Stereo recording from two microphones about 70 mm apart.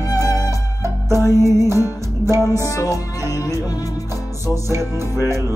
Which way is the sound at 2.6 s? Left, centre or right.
Left.